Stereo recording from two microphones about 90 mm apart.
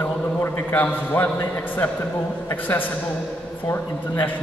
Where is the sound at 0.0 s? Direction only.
20° left (ahead or behind).